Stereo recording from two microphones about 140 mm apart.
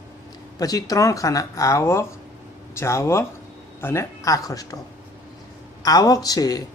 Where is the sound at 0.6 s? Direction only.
25° left (ahead or behind).